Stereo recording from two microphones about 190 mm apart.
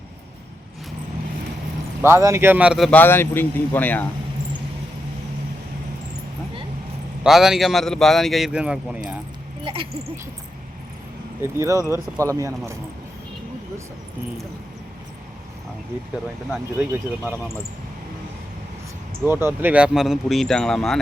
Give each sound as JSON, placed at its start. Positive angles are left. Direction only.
{"t": 2.0, "sound": "speech", "side_deg": -15}
{"t": 3.0, "sound": "speech", "side_deg": 10}
{"t": 7.3, "sound": "speech", "side_deg": 0}
{"t": 11.4, "sound": "speech", "side_deg": -15}
{"t": 16.7, "sound": "speech", "side_deg": -10}
{"t": 19.2, "sound": "speech", "side_deg": -10}